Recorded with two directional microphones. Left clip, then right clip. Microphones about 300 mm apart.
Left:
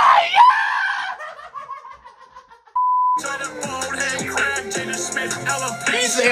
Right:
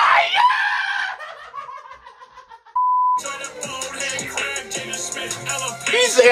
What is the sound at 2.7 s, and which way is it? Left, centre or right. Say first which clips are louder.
Beep: even; centre.